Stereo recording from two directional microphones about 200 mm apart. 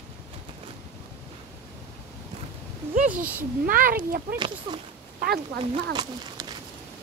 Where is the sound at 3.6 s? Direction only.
45° right (ahead or behind).